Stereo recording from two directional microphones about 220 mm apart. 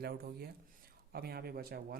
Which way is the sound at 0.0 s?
45° right (ahead or behind).